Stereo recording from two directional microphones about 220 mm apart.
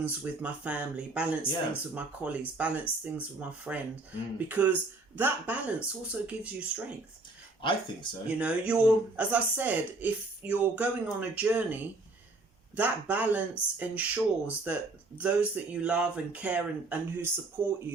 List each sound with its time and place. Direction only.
0.0 s speech: 5° right (ahead or behind)
7.6 s speech: 20° left (ahead or behind)
8.4 s speech: 5° right (ahead or behind)